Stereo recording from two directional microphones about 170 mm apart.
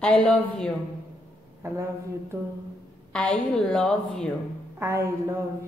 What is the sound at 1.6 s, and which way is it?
Speech, 15° right (ahead or behind).